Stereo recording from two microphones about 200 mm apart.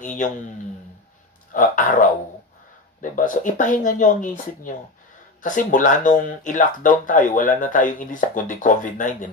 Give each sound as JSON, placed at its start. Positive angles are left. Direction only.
{"t": 0.0, "sound": "speech", "side_deg": 40}
{"t": 1.5, "sound": "speech", "side_deg": 40}